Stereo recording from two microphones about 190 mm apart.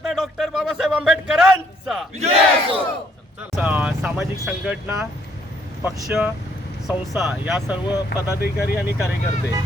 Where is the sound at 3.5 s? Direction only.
5° right (ahead or behind).